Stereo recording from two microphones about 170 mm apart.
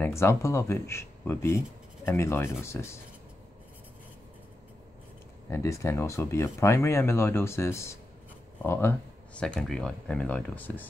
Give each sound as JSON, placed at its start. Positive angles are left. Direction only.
{"t": 0.0, "sound": "speech", "side_deg": 15}
{"t": 5.5, "sound": "speech", "side_deg": 15}